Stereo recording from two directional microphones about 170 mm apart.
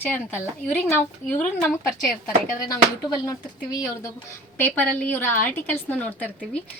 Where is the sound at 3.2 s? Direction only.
20° left (ahead or behind).